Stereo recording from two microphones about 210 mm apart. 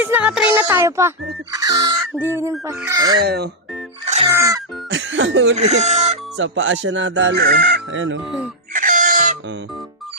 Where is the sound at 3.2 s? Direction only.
50° right (ahead or behind).